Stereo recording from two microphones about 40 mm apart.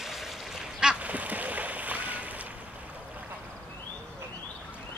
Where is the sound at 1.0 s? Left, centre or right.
Right.